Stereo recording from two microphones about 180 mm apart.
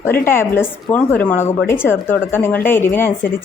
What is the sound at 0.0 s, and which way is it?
A woman's voice, 10° left (ahead or behind).